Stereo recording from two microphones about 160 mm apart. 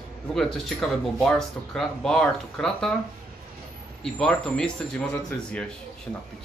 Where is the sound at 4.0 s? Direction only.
5° left (ahead or behind).